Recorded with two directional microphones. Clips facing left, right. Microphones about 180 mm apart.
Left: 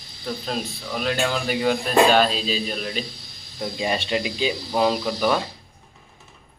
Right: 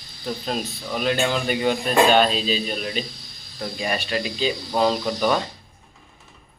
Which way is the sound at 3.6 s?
20° left (ahead or behind).